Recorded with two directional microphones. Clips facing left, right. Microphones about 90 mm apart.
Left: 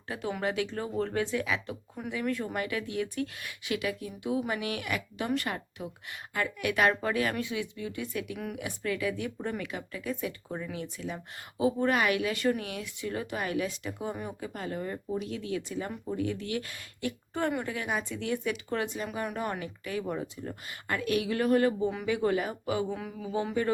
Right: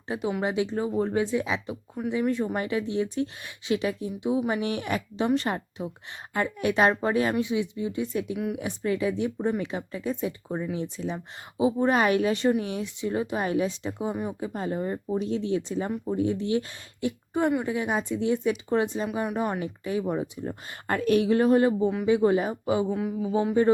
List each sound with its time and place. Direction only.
0.1 s speech: 15° right (ahead or behind)
11.9 s speech: 30° right (ahead or behind)
20.7 s speech: 40° right (ahead or behind); by 23.5 s 15° right (ahead or behind)